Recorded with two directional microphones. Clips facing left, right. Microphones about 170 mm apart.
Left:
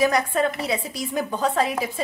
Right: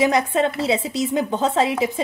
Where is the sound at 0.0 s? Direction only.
20° right (ahead or behind).